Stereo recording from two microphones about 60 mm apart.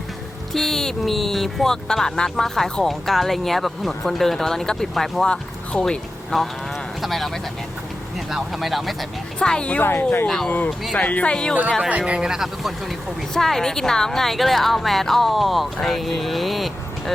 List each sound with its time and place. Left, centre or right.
0.5 s speech: centre
9.4 s speech: centre
9.8 s speech: left
10.2 s speech: centre
10.9 s speech: left
11.9 s speech: right; by 16.7 s centre